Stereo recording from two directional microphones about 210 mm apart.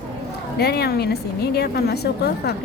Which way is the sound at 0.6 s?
50° left (ahead or behind).